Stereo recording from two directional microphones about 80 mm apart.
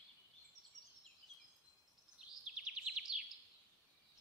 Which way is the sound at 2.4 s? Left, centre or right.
Centre.